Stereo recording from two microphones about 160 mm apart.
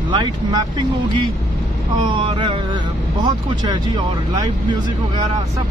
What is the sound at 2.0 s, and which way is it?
Speech, 30° right (ahead or behind).